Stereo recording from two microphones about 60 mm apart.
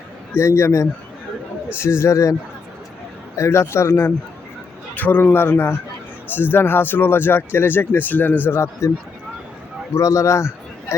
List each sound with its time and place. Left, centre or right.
0.3 s speech: left
3.3 s speech: left
4.9 s a man's voice: left
5.3 s speech: left
8.4 s speech: left
9.9 s a man's voice: left